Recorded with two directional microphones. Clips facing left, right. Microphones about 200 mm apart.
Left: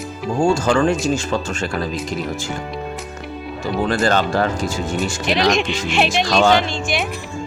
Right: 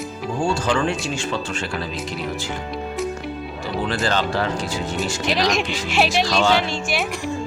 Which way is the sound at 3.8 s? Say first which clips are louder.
Left 4 dB; 45° left (ahead or behind).